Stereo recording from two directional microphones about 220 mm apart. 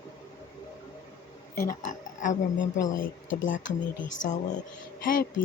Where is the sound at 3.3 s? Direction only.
60° left (ahead or behind).